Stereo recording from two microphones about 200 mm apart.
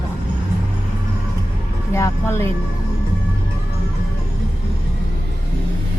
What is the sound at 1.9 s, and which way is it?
Speech, 15° left (ahead or behind).